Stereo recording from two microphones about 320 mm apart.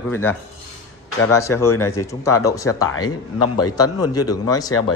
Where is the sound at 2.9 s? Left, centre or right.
Left.